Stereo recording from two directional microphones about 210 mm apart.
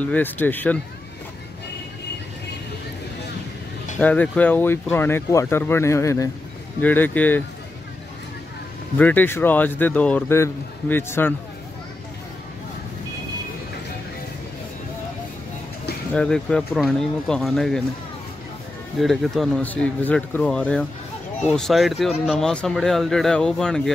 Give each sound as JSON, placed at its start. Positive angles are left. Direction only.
{"t": 0.0, "sound": "speech", "side_deg": 10}
{"t": 4.0, "sound": "speech", "side_deg": 5}
{"t": 8.9, "sound": "speech", "side_deg": 10}
{"t": 16.1, "sound": "speech", "side_deg": 5}
{"t": 18.9, "sound": "speech", "side_deg": 0}